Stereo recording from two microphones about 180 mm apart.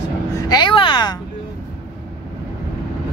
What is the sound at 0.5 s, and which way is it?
Speech, 25° left (ahead or behind).